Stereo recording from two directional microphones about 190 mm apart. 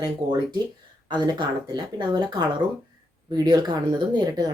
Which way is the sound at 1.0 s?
25° right (ahead or behind).